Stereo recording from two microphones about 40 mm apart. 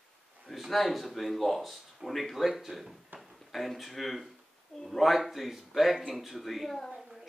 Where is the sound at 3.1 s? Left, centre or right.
Right.